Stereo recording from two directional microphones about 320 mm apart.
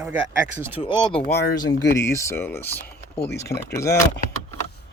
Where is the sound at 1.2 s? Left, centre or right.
Left.